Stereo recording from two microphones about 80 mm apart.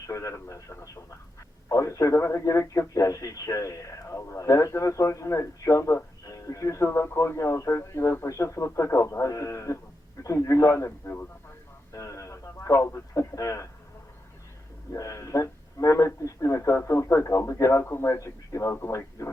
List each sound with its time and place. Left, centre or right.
0.1 s a man's voice: left
11.9 s radio: left
14.9 s a man's voice: left